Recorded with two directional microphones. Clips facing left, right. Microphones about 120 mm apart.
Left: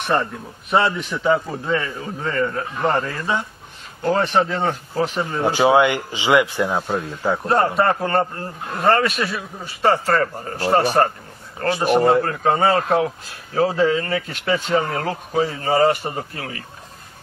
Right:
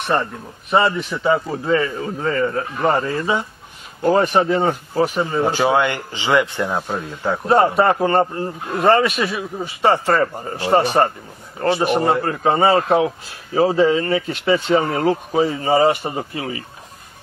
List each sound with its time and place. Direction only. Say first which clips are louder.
0.0 s a man's voice: right 1 dB; centre (ahead or behind)
5.2 s a man's voice: right 2 dB; 15° right (ahead or behind)
5.5 s speech: left 6 dB; 15° left (ahead or behind)
7.4 s a man's voice: right 4 dB; 10° right (ahead or behind)